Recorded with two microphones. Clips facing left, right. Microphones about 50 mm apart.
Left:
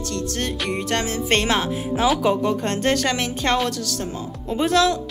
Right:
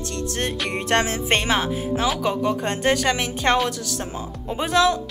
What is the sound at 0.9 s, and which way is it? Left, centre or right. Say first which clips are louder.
Music: right 5 dB; right.